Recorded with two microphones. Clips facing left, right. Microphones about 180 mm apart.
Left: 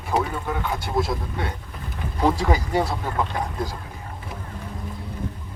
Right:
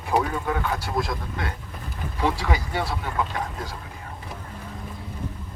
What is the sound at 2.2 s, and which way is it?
Speech, 40° left (ahead or behind).